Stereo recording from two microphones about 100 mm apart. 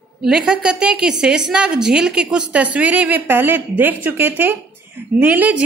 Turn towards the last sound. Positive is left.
turn(degrees=-15)  # may be behind; listen again after turning